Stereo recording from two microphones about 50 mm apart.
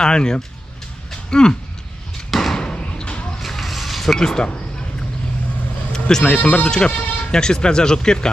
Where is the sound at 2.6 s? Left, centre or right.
Centre.